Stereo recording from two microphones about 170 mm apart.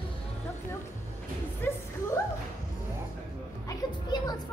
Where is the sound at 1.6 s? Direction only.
15° left (ahead or behind).